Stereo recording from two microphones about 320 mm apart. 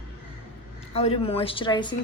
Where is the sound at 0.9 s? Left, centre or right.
Centre.